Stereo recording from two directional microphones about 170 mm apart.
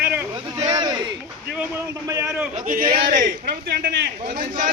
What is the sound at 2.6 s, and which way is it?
A man's voice, 55° right (ahead or behind).